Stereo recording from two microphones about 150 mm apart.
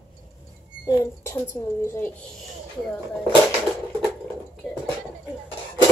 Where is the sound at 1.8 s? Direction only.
15° left (ahead or behind).